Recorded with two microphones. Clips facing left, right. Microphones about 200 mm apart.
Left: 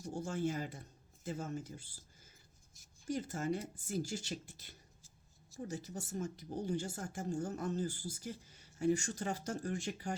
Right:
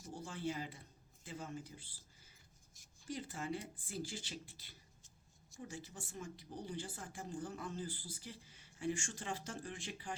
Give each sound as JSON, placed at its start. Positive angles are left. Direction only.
{"t": 0.1, "sound": "speech", "side_deg": 45}